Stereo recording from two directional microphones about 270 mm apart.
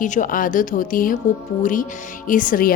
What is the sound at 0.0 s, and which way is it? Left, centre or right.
A woman's voice, left.